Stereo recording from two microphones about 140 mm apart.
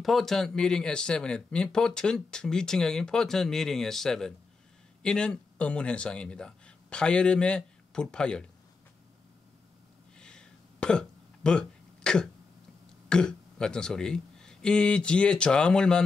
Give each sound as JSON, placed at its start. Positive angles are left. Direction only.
{"t": 0.0, "sound": "speech", "side_deg": 0}
{"t": 10.1, "sound": "a sound", "side_deg": 5}
{"t": 13.1, "sound": "speech", "side_deg": 5}